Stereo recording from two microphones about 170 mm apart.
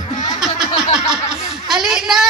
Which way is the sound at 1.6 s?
Centre (ahead or behind).